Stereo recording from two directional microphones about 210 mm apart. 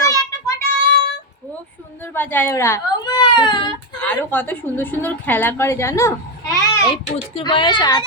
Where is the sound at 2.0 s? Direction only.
10° left (ahead or behind).